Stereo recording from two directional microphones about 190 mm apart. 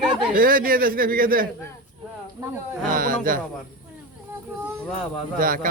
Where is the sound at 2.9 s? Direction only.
45° right (ahead or behind).